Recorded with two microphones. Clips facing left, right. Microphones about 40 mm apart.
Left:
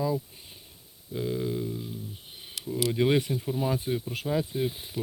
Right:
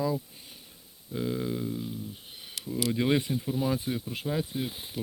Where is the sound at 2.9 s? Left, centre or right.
Centre.